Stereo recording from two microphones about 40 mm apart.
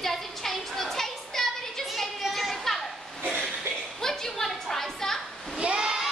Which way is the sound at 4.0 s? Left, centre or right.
Centre.